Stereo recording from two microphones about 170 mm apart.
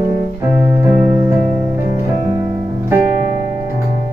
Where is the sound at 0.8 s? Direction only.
10° right (ahead or behind).